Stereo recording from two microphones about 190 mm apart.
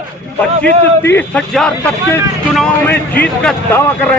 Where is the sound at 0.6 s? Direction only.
10° left (ahead or behind).